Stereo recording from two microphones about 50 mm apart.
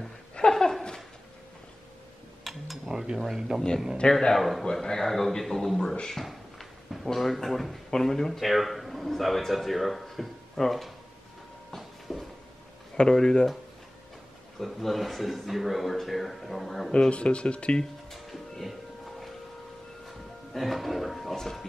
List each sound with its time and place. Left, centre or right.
0.4 s laughter: centre
2.4 s a sound: centre
2.9 s speech: centre
4.0 s speech: centre
4.4 s speech: centre
11.7 s a sound: centre
13.1 s speech: centre
14.6 s speech: centre
16.9 s speech: left
18.5 s music: centre
20.1 s speech: centre